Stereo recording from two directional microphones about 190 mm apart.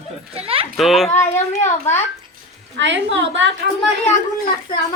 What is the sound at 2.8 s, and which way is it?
Speech, 70° right (ahead or behind).